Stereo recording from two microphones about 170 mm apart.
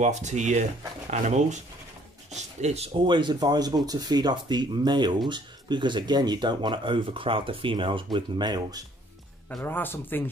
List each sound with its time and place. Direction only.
0.0 s speech: 45° right (ahead or behind); by 8.8 s 25° right (ahead or behind)
9.5 s speech: 10° left (ahead or behind)